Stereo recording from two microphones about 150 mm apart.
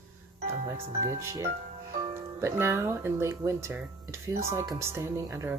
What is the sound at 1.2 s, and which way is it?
Speech, 20° right (ahead or behind).